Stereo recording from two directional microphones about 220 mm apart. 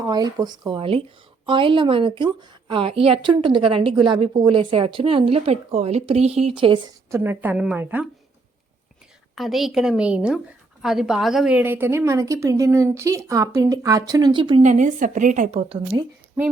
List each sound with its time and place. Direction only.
0.0 s a woman's voice: 15° right (ahead or behind)
7.2 s a woman's voice: 10° right (ahead or behind)
9.3 s a woman's voice: centre (ahead or behind); by 14.6 s 20° right (ahead or behind)
14.6 s a woman's voice: 35° right (ahead or behind)
15.9 s a woman's voice: 10° right (ahead or behind)